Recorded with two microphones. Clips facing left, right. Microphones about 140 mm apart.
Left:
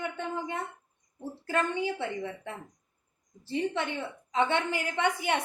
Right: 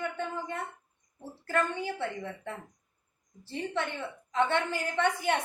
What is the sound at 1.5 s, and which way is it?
A woman's voice, 15° left (ahead or behind).